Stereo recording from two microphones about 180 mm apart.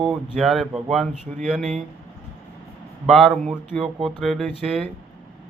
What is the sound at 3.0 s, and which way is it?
A man's voice, centre (ahead or behind).